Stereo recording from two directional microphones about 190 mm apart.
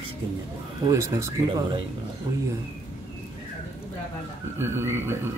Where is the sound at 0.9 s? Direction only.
15° right (ahead or behind).